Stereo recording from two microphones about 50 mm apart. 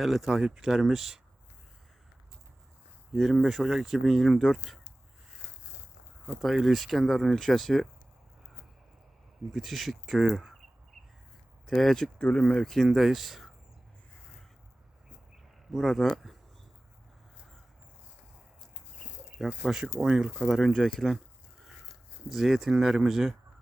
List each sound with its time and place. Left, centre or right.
0.0 s speech: centre
3.1 s speech: centre
6.4 s speech: centre
9.5 s speech: centre
11.6 s speech: centre
15.7 s speech: centre
19.4 s speech: centre
19.8 s speech: right
20.4 s speech: centre
22.3 s speech: centre